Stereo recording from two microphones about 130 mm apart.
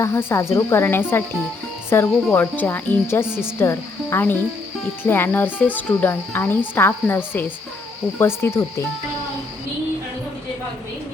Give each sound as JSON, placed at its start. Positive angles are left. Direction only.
{"t": 0.0, "sound": "speech", "side_deg": 20}